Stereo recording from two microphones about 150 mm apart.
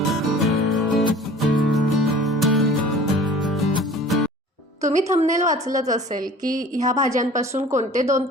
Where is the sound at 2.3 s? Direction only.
Centre (ahead or behind).